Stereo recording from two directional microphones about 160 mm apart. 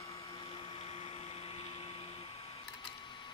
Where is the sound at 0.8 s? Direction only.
35° left (ahead or behind).